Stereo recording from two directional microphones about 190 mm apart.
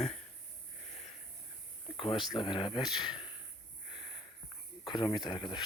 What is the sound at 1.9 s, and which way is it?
Speech, 25° left (ahead or behind).